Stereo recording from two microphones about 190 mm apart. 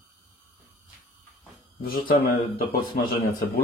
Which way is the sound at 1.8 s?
50° left (ahead or behind).